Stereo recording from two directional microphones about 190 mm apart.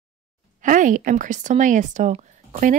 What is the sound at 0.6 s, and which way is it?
Speech, 40° right (ahead or behind).